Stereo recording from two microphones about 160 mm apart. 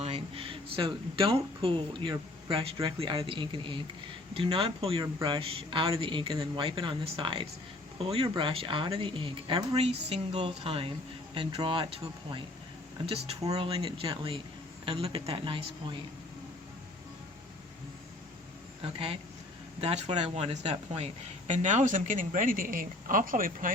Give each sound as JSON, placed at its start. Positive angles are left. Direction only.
{"t": 0.0, "sound": "a man's voice", "side_deg": -35}
{"t": 13.4, "sound": "speech", "side_deg": -25}
{"t": 13.7, "sound": "a man's voice", "side_deg": -35}
{"t": 18.8, "sound": "a man's voice", "side_deg": -35}